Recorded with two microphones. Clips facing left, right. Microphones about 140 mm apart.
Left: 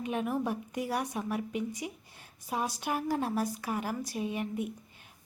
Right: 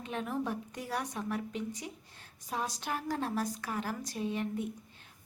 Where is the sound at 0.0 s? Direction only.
10° left (ahead or behind).